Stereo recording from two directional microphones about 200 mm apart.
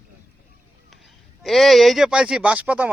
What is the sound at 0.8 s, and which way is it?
A man's voice, centre (ahead or behind).